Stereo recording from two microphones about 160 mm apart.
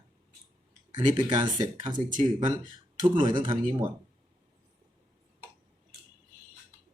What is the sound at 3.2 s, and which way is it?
Speech, 30° right (ahead or behind).